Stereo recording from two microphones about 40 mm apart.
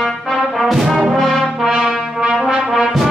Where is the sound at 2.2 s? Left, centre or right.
Centre.